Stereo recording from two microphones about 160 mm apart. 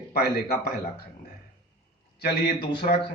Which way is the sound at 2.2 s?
90° left.